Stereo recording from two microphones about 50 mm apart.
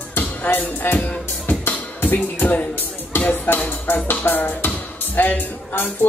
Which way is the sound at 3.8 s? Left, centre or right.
Left.